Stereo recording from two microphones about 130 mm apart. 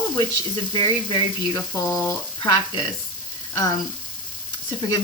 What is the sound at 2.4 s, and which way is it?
Speech, 35° left (ahead or behind).